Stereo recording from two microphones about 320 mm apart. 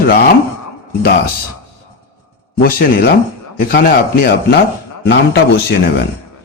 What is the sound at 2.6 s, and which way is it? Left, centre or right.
A man's voice, left.